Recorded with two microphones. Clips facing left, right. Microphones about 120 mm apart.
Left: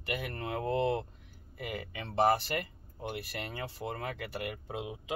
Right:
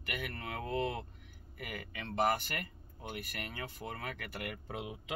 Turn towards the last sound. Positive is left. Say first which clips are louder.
# left 3 dB
turn(degrees=20)  # may be behind; listen again after turning